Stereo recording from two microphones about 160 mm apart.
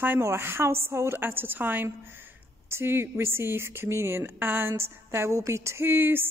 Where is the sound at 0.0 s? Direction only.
15° right (ahead or behind).